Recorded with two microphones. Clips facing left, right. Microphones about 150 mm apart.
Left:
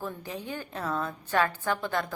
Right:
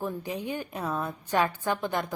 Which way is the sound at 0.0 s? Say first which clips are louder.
Right 4 dB; 15° right (ahead or behind).